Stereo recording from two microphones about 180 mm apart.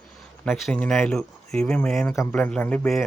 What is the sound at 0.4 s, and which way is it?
Speech, centre (ahead or behind).